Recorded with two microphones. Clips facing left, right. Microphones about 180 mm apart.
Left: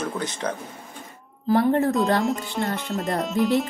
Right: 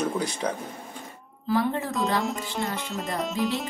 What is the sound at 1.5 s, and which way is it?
Speech, 55° left (ahead or behind).